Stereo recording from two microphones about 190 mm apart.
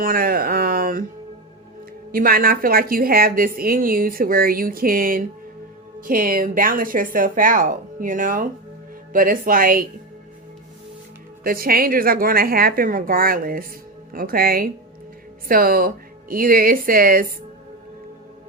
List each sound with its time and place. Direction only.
0.0 s speech: 50° right (ahead or behind)
2.1 s a woman's voice: 50° right (ahead or behind)
11.4 s a woman's voice: 50° right (ahead or behind)